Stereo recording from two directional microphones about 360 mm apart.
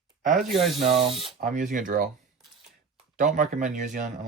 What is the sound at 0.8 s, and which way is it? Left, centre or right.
Speech, centre.